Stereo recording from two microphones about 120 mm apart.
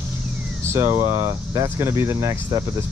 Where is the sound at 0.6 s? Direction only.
20° right (ahead or behind).